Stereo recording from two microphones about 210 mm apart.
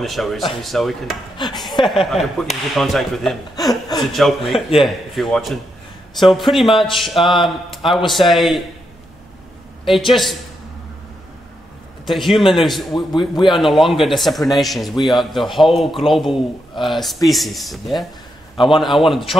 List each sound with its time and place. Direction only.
0.0 s speech: centre (ahead or behind)
1.4 s a man's voice: 20° left (ahead or behind)
1.9 s speech: centre (ahead or behind)
3.5 s speech: 20° left (ahead or behind)
4.1 s speech: centre (ahead or behind)
9.8 s speech: centre (ahead or behind)
12.1 s speech: centre (ahead or behind)
13.1 s a man's voice: 20° left (ahead or behind)
13.6 s speech: centre (ahead or behind)